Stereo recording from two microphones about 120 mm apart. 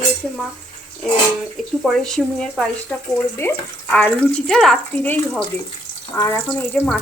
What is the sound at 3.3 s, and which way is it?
Speech, 15° left (ahead or behind).